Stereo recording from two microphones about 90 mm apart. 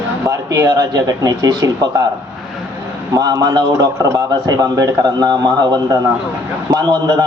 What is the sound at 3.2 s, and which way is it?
A man's voice, 45° right (ahead or behind).